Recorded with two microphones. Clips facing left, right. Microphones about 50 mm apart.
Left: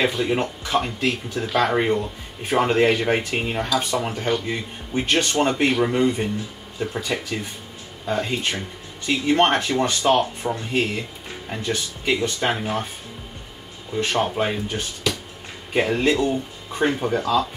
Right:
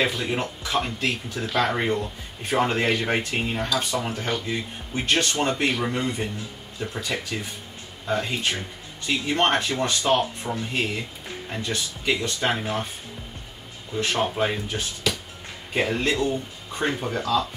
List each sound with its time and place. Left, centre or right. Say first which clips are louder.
0.0 s speech: left 3 dB; centre
13.9 s speech: left 2 dB; centre